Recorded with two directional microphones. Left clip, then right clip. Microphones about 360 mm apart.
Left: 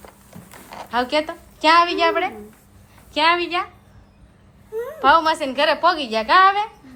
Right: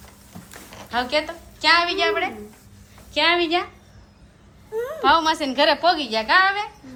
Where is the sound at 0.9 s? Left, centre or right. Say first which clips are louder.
Left 2 dB; centre.